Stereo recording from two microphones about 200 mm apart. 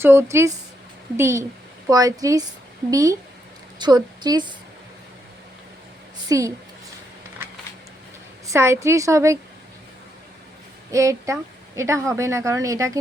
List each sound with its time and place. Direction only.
0.0 s a woman's voice: 10° right (ahead or behind)
6.2 s a woman's voice: 15° right (ahead or behind)
8.4 s a woman's voice: 15° right (ahead or behind)
10.9 s a woman's voice: 15° right (ahead or behind)